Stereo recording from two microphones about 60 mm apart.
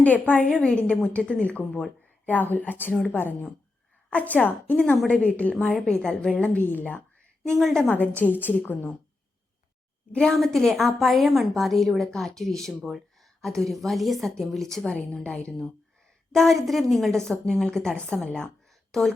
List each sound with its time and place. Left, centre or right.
0.0 s a woman's voice: left
6.7 s speech: left
7.6 s a woman's voice: centre
7.9 s a woman's voice: left
10.1 s a woman's voice: centre
10.3 s speech: centre
14.9 s a woman's voice: centre
16.3 s a woman's voice: centre
18.7 s a sound: centre